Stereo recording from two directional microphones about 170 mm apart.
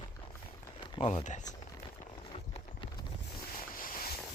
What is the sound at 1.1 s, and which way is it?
Speech, 45° left (ahead or behind).